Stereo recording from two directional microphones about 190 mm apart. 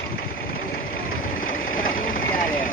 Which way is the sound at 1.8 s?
45° left (ahead or behind).